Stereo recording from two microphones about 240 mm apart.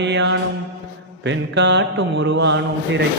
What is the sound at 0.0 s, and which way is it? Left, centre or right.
Speech, right.